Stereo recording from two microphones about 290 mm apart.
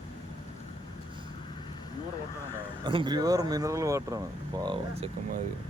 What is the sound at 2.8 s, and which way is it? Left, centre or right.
Speech, centre.